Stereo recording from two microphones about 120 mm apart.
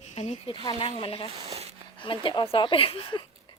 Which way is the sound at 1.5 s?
60° right (ahead or behind).